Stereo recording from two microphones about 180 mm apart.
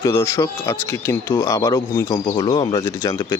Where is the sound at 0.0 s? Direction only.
15° left (ahead or behind).